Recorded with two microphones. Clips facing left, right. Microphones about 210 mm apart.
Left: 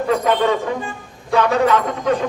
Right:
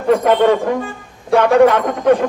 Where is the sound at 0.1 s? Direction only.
55° right (ahead or behind).